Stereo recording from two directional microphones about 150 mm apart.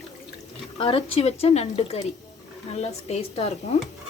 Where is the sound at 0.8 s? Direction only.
35° left (ahead or behind).